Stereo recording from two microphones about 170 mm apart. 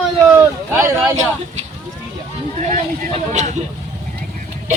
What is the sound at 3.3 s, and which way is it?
Speech, 45° right (ahead or behind).